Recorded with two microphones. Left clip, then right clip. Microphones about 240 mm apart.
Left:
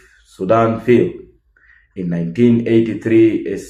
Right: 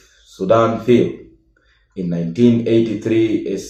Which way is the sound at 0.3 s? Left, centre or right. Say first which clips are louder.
Even; left.